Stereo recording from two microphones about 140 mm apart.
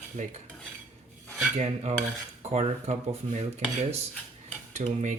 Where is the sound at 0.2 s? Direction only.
60° right (ahead or behind).